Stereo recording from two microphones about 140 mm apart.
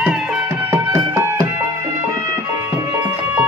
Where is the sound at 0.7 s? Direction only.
20° right (ahead or behind).